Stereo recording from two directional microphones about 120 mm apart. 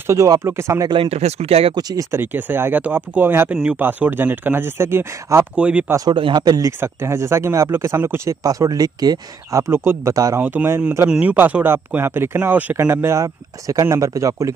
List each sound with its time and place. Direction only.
0.0 s speech: 25° right (ahead or behind)
1.0 s speech: 60° right (ahead or behind)
1.8 s speech: 30° right (ahead or behind)
5.6 s speech: 10° right (ahead or behind)
5.9 s speech: 30° right (ahead or behind)
6.1 s speech: 40° right (ahead or behind)
6.8 s speech: 20° right (ahead or behind)
8.5 s speech: 30° right (ahead or behind)
10.4 s speech: 15° right (ahead or behind)
11.1 s speech: 10° right (ahead or behind); by 14.5 s 25° right (ahead or behind)